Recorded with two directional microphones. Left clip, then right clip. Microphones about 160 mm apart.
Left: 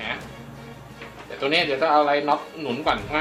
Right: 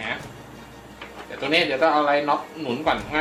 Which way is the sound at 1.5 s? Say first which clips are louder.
Even; 30° left (ahead or behind).